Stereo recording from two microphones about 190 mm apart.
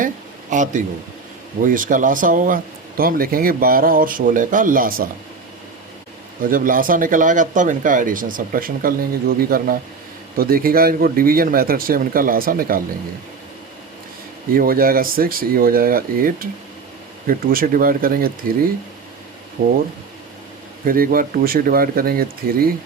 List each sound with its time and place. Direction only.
0.5 s a man's voice: 40° right (ahead or behind)
6.4 s speech: 45° right (ahead or behind)
14.5 s speech: 50° right (ahead or behind)
20.8 s speech: 50° right (ahead or behind)